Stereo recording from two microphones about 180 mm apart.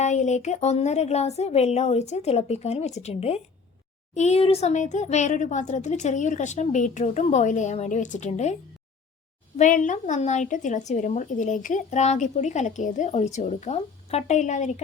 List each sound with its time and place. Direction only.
0.0 s a woman's voice: 40° left (ahead or behind)
9.6 s a woman's voice: 45° left (ahead or behind)